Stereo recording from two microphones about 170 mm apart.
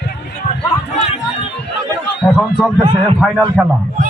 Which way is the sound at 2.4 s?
Centre (ahead or behind).